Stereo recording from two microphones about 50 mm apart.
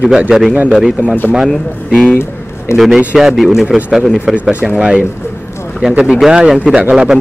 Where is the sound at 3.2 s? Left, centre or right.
Centre.